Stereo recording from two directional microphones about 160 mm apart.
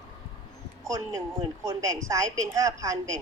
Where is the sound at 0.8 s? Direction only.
20° right (ahead or behind).